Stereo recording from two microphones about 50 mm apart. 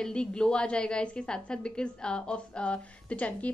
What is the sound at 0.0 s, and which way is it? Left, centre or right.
A woman's voice, centre.